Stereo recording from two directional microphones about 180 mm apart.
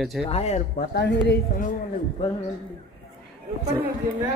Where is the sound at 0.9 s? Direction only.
65° left (ahead or behind).